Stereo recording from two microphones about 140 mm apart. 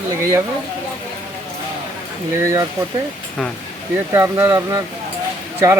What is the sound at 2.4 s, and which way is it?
Speech, 20° right (ahead or behind).